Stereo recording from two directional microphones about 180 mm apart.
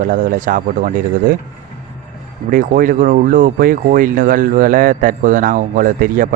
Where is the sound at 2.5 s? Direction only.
50° right (ahead or behind).